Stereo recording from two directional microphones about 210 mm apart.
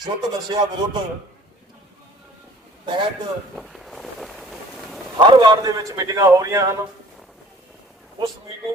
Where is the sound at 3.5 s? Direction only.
Centre (ahead or behind).